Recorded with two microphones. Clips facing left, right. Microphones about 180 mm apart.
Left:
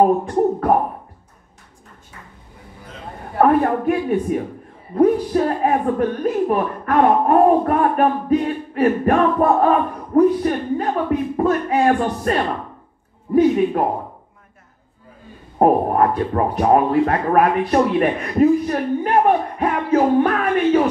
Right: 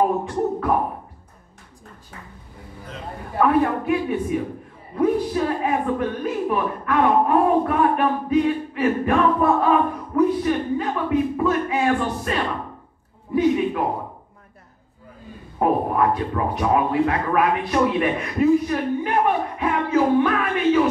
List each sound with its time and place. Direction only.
0.0 s a woman's voice: 45° left (ahead or behind)
3.3 s a woman's voice: 45° left (ahead or behind)
15.6 s a woman's voice: 45° left (ahead or behind)